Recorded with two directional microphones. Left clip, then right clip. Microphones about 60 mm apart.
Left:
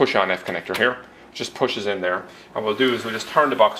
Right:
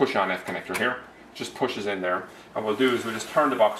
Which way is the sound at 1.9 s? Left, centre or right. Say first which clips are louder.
Left 4 dB; centre.